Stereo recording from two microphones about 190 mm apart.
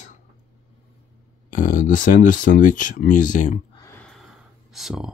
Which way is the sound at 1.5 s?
45° left (ahead or behind).